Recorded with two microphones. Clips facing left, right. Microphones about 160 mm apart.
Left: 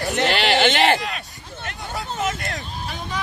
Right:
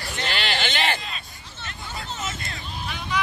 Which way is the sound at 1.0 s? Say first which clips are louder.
Left 7 dB; 70° left (ahead or behind).